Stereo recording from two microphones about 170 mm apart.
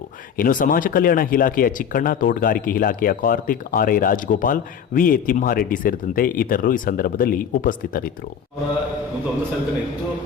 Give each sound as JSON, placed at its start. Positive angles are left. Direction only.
{"t": 0.3, "sound": "speech", "side_deg": 55}